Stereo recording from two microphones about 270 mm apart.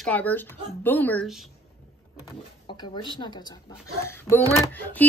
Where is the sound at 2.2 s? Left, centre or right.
Centre.